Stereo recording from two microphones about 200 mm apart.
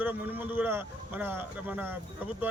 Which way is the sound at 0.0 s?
10° right (ahead or behind).